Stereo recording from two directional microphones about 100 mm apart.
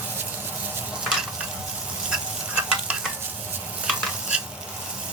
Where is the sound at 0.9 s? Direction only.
10° right (ahead or behind).